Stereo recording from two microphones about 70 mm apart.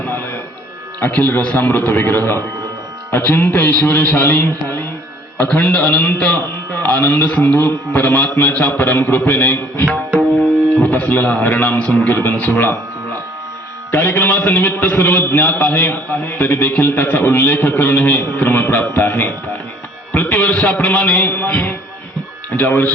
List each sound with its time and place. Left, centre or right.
0.1 s a sound: left
0.9 s a man's voice: left
10.8 s a man's voice: left
13.9 s a man's voice: left